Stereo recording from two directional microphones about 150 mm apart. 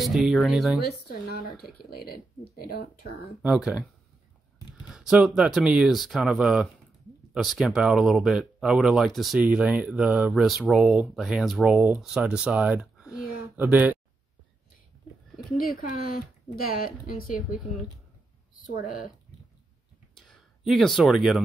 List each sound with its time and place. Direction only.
0.0 s speech: centre (ahead or behind)
0.7 s speech: 90° left
3.4 s speech: 5° right (ahead or behind)
4.8 s speech: 5° right (ahead or behind)
15.6 s a woman's voice: 65° left (ahead or behind)
18.5 s speech: 65° left (ahead or behind)
20.2 s a sound: centre (ahead or behind)